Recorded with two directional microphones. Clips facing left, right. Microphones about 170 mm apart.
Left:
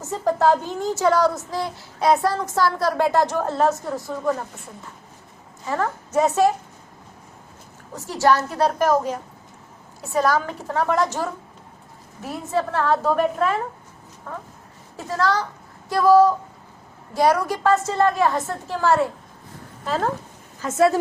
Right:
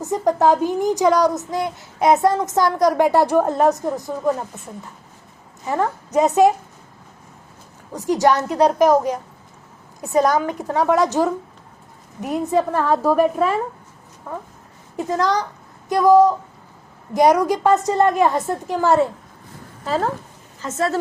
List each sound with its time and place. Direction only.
0.0 s a woman's voice: 15° right (ahead or behind)
5.6 s a child's voice: 20° right (ahead or behind)
7.9 s a child's voice: 15° right (ahead or behind)
19.8 s speech: 5° right (ahead or behind)
20.6 s a woman's voice: 10° left (ahead or behind)